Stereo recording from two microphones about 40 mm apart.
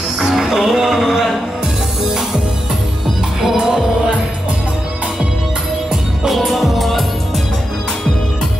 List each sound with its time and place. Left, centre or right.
0.2 s music: centre
3.5 s music: centre
6.2 s music: centre